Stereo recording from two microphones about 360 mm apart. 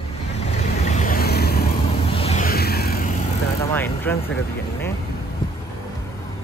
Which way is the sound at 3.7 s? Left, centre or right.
Centre.